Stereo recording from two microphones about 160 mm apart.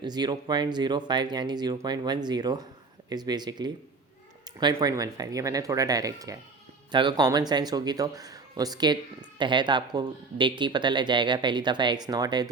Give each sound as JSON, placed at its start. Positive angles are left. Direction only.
{"t": 0.0, "sound": "speech", "side_deg": -25}